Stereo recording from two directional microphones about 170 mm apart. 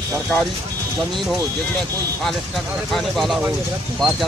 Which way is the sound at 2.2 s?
Centre (ahead or behind).